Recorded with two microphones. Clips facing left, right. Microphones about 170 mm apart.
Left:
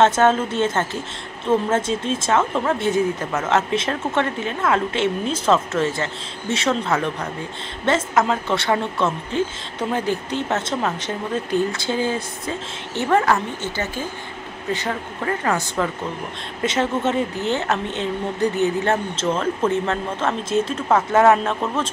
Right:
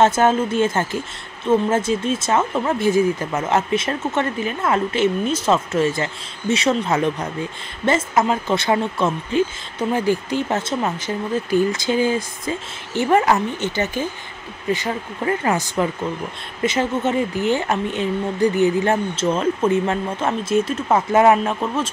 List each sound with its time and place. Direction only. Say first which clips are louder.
0.0 s speech: even; 10° right (ahead or behind)